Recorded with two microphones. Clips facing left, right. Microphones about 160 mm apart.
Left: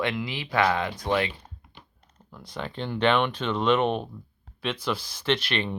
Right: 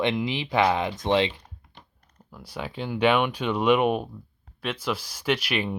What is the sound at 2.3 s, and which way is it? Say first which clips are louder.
Speech: even; 5° right (ahead or behind).